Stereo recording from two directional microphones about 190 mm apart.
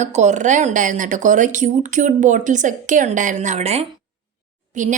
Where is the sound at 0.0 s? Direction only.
40° right (ahead or behind).